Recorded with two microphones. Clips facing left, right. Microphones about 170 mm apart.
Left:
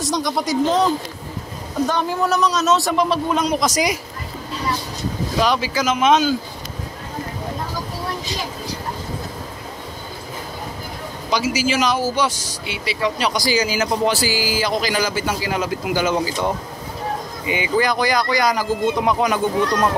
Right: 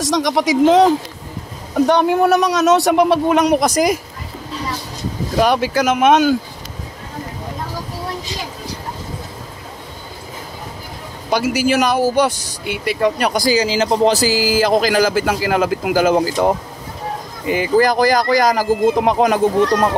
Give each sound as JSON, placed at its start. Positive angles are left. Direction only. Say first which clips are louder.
{"t": 0.0, "sound": "speech", "louder": "right 5 dB", "side_deg": -90}
{"t": 1.9, "sound": "speech", "louder": "right 8 dB", "side_deg": -60}
{"t": 5.4, "sound": "speech", "louder": "right 5 dB", "side_deg": -55}
{"t": 11.5, "sound": "speech", "louder": "right 5 dB", "side_deg": -55}
{"t": 13.6, "sound": "speech", "louder": "right 4 dB", "side_deg": -30}
{"t": 17.6, "sound": "speech", "louder": "right 5 dB", "side_deg": -40}